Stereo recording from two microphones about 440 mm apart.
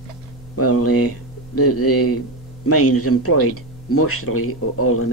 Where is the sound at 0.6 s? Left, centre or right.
Left.